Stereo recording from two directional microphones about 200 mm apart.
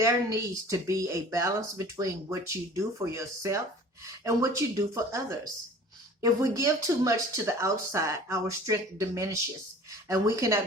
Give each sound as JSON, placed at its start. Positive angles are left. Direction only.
{"t": 0.0, "sound": "speech", "side_deg": -15}
{"t": 6.2, "sound": "speech", "side_deg": -15}